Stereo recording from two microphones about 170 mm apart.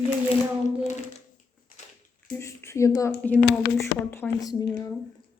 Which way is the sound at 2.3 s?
15° left (ahead or behind).